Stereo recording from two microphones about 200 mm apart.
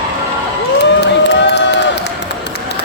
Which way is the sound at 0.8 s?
60° left (ahead or behind).